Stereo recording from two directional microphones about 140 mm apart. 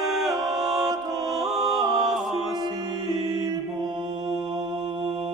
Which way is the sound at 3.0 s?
30° right (ahead or behind).